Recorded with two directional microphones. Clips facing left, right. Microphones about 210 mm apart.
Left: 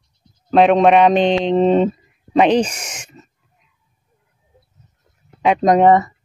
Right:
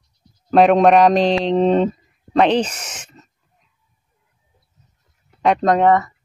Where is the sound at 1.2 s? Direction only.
35° right (ahead or behind).